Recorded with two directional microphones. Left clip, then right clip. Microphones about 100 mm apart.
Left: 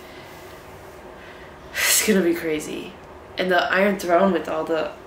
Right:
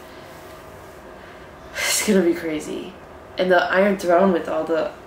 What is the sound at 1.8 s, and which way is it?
Speech, 10° left (ahead or behind).